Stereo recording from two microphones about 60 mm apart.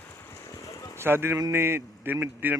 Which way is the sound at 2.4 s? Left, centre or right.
Right.